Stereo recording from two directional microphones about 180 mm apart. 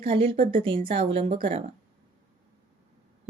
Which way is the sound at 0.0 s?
30° right (ahead or behind).